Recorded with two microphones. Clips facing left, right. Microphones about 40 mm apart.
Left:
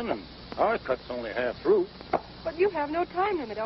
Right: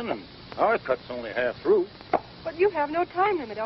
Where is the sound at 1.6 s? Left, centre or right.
Centre.